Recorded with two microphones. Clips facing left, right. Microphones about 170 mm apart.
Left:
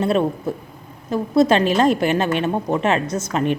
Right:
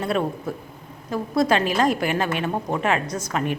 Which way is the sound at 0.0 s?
25° left (ahead or behind).